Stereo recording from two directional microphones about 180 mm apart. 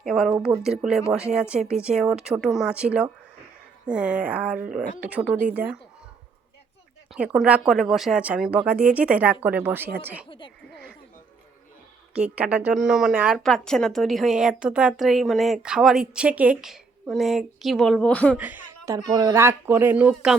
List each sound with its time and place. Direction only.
0.0 s speech: centre (ahead or behind)
7.1 s speech: 5° right (ahead or behind)
10.2 s speech: 30° left (ahead or behind)
12.1 s speech: 5° right (ahead or behind)
18.3 s speech: 10° right (ahead or behind)